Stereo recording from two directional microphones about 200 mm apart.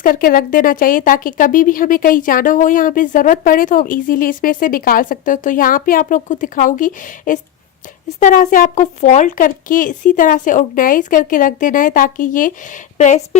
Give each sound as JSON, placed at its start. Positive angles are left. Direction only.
{"t": 0.0, "sound": "speech", "side_deg": 45}